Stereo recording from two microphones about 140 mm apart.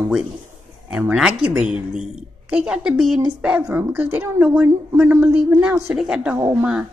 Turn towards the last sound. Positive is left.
turn(degrees=-20)  # may be behind; listen again after turning